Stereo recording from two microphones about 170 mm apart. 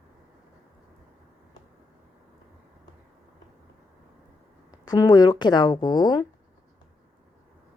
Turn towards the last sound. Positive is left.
turn(degrees=25)  # may be behind; listen again after turning